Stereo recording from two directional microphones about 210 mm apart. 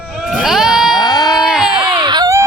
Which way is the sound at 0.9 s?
20° left (ahead or behind).